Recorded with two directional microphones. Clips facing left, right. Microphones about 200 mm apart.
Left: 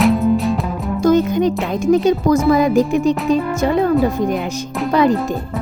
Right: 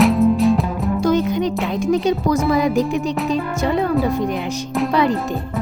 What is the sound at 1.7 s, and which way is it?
Speech, 50° left (ahead or behind).